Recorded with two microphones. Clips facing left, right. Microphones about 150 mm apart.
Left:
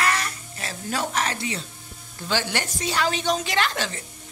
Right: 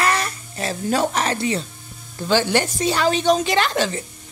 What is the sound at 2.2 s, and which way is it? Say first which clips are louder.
A woman's voice: right 8 dB; 30° right (ahead or behind).